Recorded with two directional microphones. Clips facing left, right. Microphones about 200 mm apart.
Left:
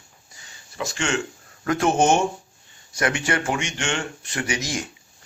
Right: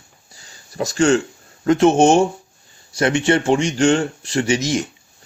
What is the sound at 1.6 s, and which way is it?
Speech, 25° right (ahead or behind).